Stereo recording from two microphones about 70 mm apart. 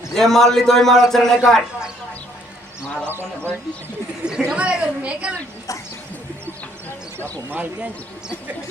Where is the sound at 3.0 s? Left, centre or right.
Right.